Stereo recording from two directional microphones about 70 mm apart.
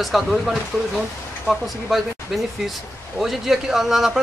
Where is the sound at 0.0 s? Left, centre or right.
Centre.